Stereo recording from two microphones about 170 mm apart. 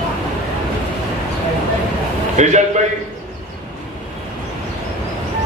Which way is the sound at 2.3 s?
45° right (ahead or behind).